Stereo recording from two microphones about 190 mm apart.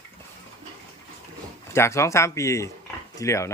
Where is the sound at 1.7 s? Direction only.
15° left (ahead or behind).